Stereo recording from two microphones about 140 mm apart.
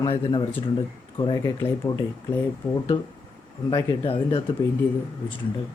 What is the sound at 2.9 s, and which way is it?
Speech, 35° left (ahead or behind).